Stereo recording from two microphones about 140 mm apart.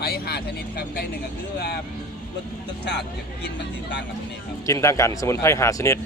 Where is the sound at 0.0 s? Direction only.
90° left.